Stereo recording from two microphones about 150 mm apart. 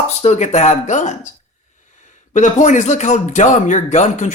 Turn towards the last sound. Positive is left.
turn(degrees=50)  # may be behind; listen again after turning